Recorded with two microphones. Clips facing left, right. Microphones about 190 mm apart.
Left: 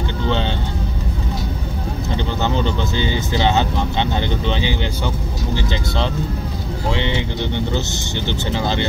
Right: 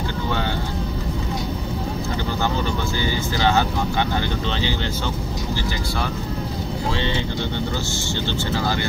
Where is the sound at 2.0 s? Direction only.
20° left (ahead or behind).